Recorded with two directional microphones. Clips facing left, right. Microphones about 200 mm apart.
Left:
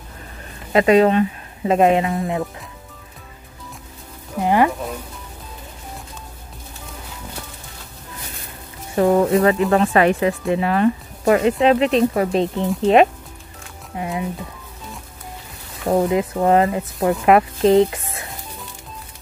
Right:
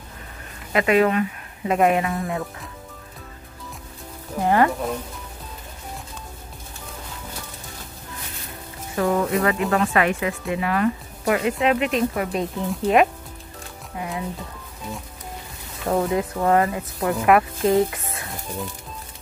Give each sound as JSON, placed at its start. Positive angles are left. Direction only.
{"t": 0.7, "sound": "speech", "side_deg": 30}
{"t": 4.4, "sound": "speech", "side_deg": 15}
{"t": 8.9, "sound": "speech", "side_deg": 30}
{"t": 15.8, "sound": "speech", "side_deg": 20}